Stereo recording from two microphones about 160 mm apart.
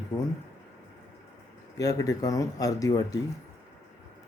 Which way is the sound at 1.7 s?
20° left (ahead or behind).